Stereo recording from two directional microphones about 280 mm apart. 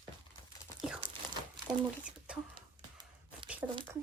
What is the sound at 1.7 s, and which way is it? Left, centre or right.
Speech, centre.